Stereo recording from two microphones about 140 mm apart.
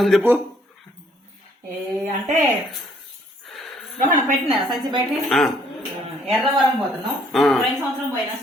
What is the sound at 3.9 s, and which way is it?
Speech, 65° right (ahead or behind).